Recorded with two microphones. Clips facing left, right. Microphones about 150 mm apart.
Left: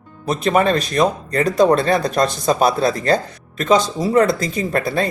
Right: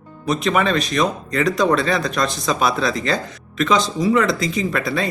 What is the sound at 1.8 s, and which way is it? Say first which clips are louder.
Speech: left 3 dB; 55° left (ahead or behind).